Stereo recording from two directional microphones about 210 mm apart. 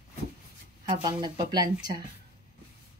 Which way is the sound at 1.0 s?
20° right (ahead or behind).